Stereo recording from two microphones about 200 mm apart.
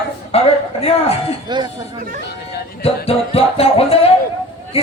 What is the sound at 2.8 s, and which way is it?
Music, 30° left (ahead or behind).